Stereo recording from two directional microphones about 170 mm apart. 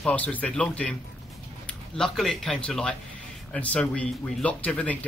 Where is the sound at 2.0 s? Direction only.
Centre (ahead or behind).